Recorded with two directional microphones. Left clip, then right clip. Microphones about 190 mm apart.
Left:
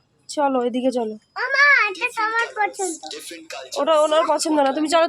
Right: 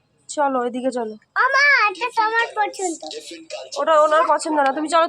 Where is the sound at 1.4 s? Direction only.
10° right (ahead or behind).